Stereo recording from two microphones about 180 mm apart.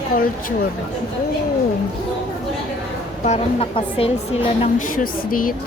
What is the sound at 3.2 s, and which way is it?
A woman's voice, 35° left (ahead or behind).